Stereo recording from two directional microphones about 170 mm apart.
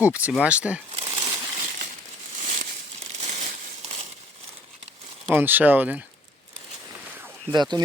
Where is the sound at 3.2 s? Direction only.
45° right (ahead or behind).